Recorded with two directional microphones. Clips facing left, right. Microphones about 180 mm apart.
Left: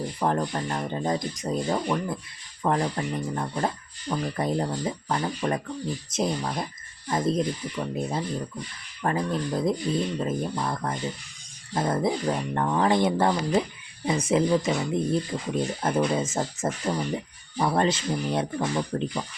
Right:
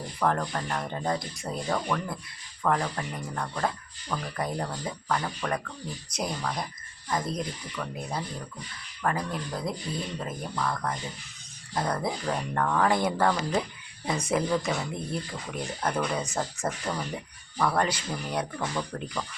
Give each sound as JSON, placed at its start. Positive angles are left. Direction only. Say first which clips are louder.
{"t": 0.2, "sound": "speech", "louder": "left 1 dB", "side_deg": 20}